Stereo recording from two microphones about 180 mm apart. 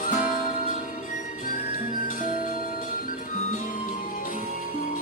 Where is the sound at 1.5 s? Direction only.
50° left (ahead or behind).